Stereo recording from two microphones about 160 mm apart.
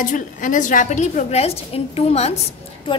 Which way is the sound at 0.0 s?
55° left (ahead or behind).